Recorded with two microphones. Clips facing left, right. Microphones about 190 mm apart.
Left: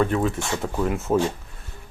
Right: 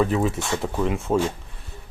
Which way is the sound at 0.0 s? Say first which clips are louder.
Even; 5° right (ahead or behind).